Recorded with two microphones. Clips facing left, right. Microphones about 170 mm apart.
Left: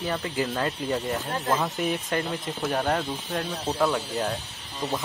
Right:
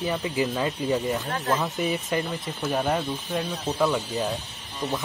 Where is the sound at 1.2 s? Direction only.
15° left (ahead or behind).